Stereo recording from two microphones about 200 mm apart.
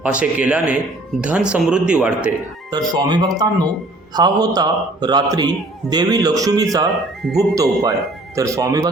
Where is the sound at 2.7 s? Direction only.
20° right (ahead or behind).